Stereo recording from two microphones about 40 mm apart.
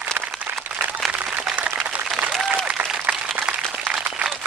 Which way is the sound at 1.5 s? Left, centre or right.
Right.